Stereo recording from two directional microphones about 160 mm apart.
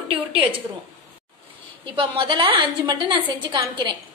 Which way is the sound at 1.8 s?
30° right (ahead or behind).